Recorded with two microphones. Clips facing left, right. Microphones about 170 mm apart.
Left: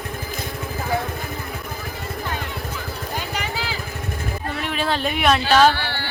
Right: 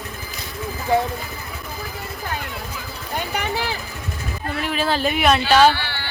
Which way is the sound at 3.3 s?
55° right (ahead or behind).